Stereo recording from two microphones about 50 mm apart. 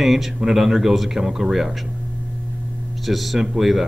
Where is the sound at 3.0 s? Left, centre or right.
Centre.